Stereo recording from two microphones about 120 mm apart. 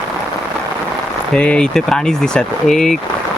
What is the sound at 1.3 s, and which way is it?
Speech, 10° left (ahead or behind).